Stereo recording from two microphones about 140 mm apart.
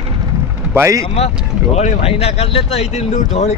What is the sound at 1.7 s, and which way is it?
Speech, 50° left (ahead or behind).